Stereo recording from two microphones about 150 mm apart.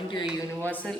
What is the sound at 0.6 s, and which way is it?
Speech, 10° left (ahead or behind).